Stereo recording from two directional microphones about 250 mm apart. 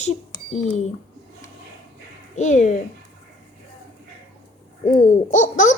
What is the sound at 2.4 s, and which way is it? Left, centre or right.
Speech, left.